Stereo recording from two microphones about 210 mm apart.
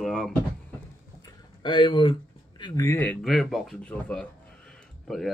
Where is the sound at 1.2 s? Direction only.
20° left (ahead or behind).